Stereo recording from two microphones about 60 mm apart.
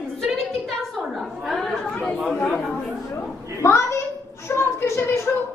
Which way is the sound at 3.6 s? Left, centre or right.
Left.